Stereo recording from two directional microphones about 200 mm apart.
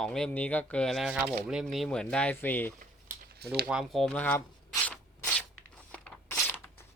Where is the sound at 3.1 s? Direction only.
50° right (ahead or behind).